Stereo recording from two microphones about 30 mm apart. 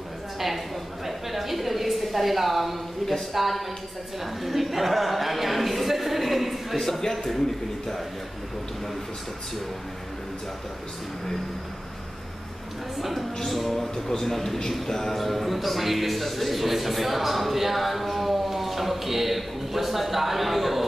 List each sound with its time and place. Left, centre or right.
1.0 s a sound: centre
3.0 s a man's voice: centre
4.4 s a sound: centre
6.8 s a man's voice: centre
13.5 s a man's voice: centre
13.7 s a man's voice: centre